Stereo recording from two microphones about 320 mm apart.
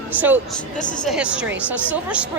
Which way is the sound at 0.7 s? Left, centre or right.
Left.